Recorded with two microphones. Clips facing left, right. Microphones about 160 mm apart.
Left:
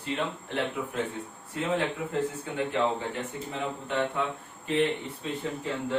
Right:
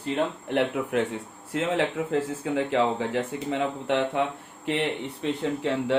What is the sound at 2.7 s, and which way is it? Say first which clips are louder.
Speech: right 4 dB; 90° right.